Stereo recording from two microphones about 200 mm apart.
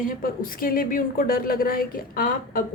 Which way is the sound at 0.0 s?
45° left (ahead or behind).